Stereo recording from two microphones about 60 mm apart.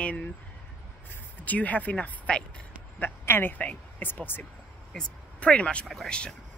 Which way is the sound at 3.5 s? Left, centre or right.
Left.